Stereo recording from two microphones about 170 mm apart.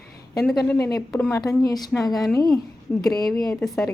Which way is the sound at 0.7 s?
15° left (ahead or behind).